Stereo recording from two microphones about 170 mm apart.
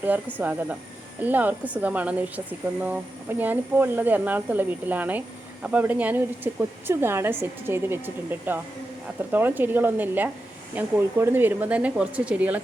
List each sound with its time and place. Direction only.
0.3 s speech: 10° right (ahead or behind)